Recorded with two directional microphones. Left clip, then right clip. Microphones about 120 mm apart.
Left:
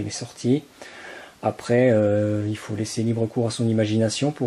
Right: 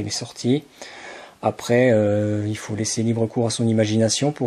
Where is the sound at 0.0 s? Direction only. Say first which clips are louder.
Right 2 dB; 30° right (ahead or behind).